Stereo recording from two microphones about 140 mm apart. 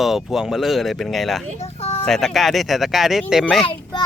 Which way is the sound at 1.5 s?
45° left (ahead or behind).